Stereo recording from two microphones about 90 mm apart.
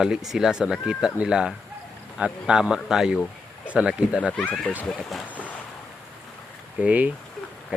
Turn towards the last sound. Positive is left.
turn(degrees=-15)  # may be behind; listen again after turning